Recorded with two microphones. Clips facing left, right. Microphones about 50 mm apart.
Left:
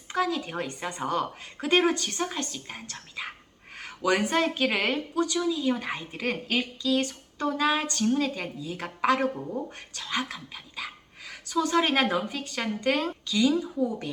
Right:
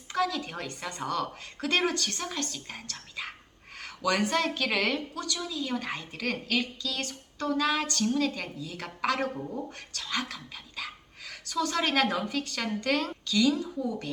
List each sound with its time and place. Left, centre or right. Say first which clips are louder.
0.1 s speech: left 2 dB; left